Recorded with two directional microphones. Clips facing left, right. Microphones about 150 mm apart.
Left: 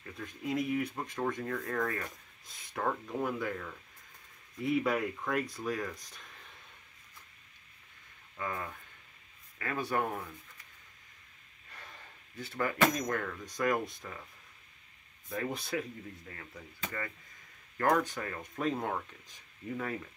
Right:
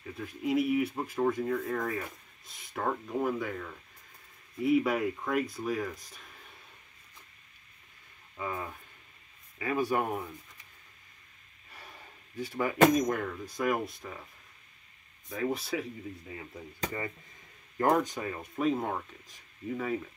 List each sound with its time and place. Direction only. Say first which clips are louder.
0.2 s speech: right 5 dB; 5° right (ahead or behind)
8.4 s speech: right 2 dB; 10° right (ahead or behind)
12.4 s speech: right 6 dB; 15° right (ahead or behind)
15.2 s speech: right 4 dB; centre (ahead or behind)
17.7 s speech: right 2 dB; 30° right (ahead or behind)
18.0 s speech: right 3 dB; 15° right (ahead or behind)